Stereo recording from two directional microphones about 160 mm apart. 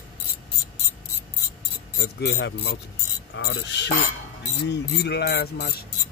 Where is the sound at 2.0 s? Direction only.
90° left.